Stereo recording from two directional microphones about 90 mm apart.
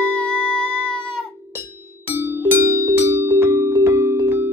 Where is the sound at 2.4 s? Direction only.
25° right (ahead or behind).